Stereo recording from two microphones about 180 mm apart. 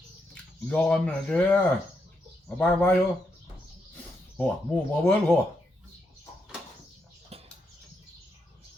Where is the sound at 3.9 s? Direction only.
10° left (ahead or behind).